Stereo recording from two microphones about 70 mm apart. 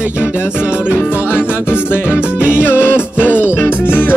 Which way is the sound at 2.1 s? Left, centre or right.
Centre.